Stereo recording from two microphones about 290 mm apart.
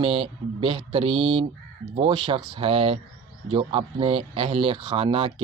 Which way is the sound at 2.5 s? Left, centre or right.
Centre.